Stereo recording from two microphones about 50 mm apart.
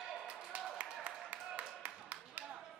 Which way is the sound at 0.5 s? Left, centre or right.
Right.